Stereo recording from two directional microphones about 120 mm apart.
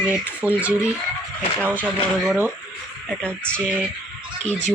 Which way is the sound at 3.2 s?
10° left (ahead or behind).